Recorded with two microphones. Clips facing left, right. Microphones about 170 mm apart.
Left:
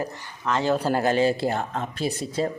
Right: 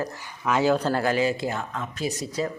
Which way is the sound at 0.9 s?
20° left (ahead or behind).